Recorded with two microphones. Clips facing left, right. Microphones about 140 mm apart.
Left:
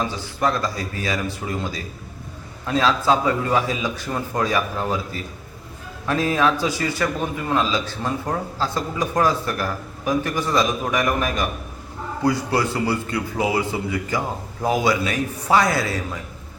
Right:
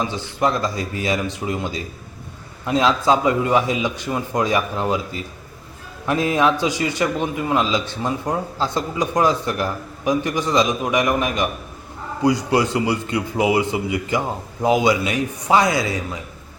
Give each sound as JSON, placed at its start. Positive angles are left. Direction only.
{"t": 0.3, "sound": "speech", "side_deg": -20}
{"t": 2.6, "sound": "speech", "side_deg": -20}
{"t": 6.1, "sound": "a man's voice", "side_deg": -20}